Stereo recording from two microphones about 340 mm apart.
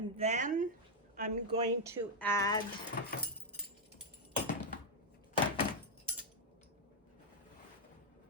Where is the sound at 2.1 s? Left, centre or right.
Centre.